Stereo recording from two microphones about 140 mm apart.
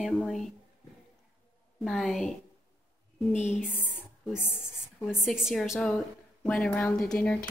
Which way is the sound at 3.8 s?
10° right (ahead or behind).